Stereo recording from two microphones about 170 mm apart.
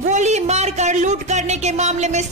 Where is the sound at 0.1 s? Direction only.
40° right (ahead or behind).